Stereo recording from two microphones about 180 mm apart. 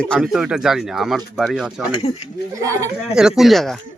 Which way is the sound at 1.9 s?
25° left (ahead or behind).